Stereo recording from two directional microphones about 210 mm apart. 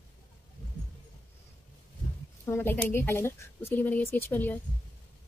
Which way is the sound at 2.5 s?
10° left (ahead or behind).